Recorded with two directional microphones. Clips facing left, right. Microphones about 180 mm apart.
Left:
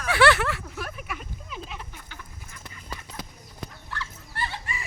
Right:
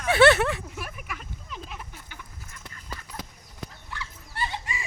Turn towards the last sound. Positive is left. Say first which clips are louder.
# right 1 dB
turn(degrees=-15)  # may be behind; listen again after turning